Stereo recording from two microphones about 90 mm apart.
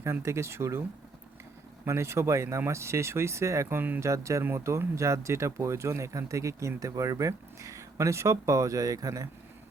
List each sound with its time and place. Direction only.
0.0 s speech: 30° right (ahead or behind)
4.0 s speech: 35° right (ahead or behind)